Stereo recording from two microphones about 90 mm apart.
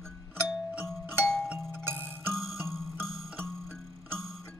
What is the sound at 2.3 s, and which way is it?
Music, centre (ahead or behind).